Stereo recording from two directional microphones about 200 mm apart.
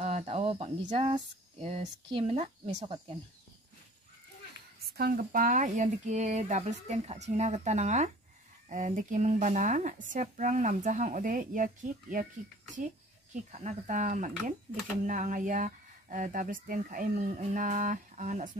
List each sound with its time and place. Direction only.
0.0 s speech: 30° right (ahead or behind)
4.8 s speech: 50° right (ahead or behind)
13.3 s speech: 35° right (ahead or behind)